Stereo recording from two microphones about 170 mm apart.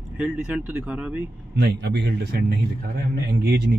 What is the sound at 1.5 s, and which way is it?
A man's voice, 85° right.